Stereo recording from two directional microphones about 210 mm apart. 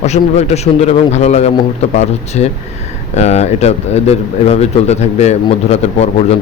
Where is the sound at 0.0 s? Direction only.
30° left (ahead or behind).